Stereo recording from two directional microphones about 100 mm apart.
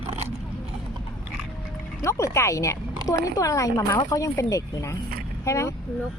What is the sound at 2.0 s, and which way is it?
Speech, 30° left (ahead or behind).